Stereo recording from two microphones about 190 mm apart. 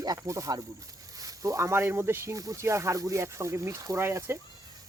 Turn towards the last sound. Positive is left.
turn(degrees=-15)  # may be behind; listen again after turning